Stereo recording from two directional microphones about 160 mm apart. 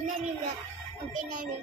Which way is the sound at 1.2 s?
50° right (ahead or behind).